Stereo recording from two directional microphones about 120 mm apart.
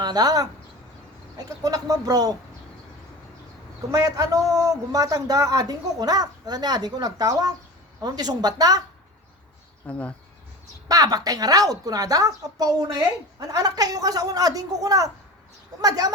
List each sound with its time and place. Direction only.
0.0 s speech: 35° right (ahead or behind)
1.6 s a man's voice: 30° right (ahead or behind)
3.9 s a man's voice: 30° right (ahead or behind)
9.8 s speech: 10° left (ahead or behind)
10.8 s a man's voice: 30° right (ahead or behind)